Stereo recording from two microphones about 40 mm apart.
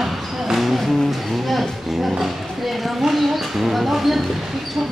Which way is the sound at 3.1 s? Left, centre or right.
Centre.